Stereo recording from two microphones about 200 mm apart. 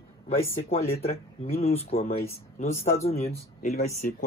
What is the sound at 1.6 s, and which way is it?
Speech, 30° left (ahead or behind).